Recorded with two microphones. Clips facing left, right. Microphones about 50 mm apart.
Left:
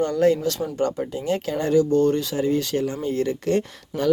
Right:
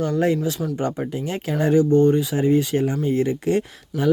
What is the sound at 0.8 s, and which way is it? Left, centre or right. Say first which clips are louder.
Speech: even; right.